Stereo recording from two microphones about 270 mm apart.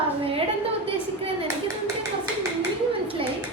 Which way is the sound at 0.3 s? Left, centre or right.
Right.